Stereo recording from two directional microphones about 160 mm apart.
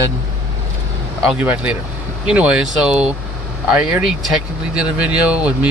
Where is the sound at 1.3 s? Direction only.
10° right (ahead or behind).